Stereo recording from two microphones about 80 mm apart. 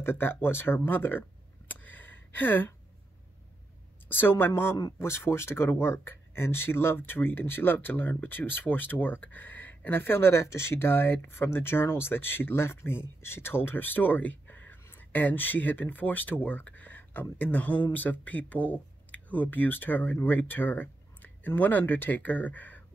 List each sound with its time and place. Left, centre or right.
0.0 s speech: left
1.7 s a sound: left
4.2 s speech: left